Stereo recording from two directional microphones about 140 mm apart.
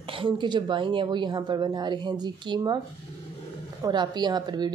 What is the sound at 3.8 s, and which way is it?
Speech, 30° right (ahead or behind).